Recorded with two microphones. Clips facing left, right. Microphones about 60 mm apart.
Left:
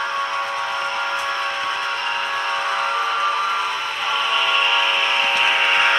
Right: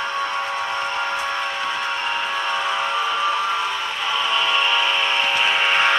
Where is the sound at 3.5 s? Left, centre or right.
Centre.